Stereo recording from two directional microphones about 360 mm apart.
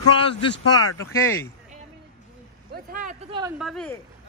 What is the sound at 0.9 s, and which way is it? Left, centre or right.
Speech, centre.